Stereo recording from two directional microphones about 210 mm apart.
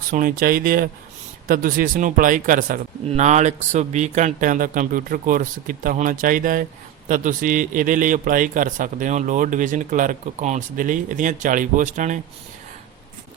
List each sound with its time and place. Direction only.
0.1 s speech: 40° right (ahead or behind)